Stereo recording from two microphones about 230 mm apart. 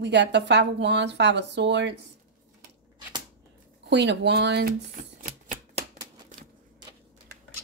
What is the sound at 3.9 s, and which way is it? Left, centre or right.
Speech, right.